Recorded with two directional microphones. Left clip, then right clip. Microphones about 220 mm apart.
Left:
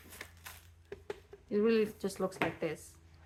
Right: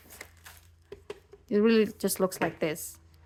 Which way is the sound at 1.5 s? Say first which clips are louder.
Right 6 dB; 40° right (ahead or behind).